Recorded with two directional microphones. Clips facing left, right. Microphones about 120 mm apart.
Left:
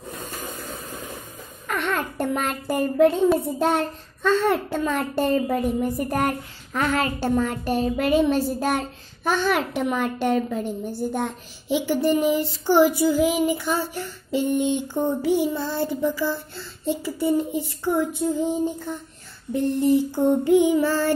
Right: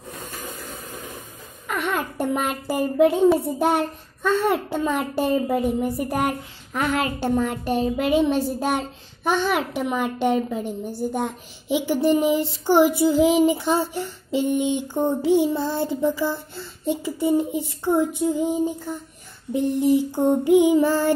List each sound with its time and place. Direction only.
1.7 s a child's voice: 5° right (ahead or behind)